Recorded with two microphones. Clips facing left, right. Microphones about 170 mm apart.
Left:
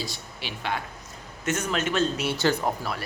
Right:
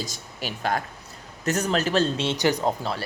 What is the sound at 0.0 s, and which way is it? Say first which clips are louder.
Speech: right 2 dB; 45° right (ahead or behind).